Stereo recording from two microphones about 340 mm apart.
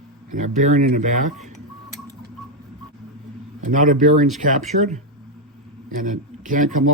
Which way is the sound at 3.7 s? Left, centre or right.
Right.